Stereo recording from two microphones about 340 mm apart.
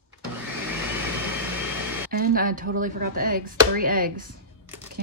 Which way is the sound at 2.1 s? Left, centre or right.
Right.